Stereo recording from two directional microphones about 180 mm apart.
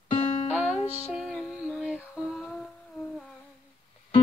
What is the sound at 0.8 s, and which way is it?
Music, 35° left (ahead or behind).